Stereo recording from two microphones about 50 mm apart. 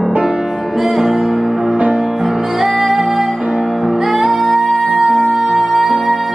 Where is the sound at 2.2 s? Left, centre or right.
Centre.